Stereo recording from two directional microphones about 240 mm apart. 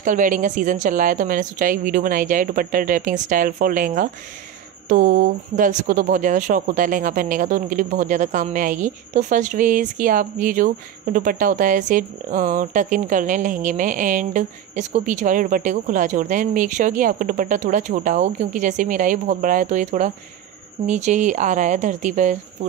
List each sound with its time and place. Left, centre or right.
0.0 s speech: right